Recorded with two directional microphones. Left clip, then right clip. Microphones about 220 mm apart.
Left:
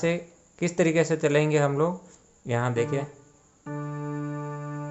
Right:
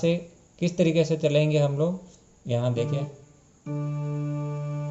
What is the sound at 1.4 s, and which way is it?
Speech, 65° left (ahead or behind).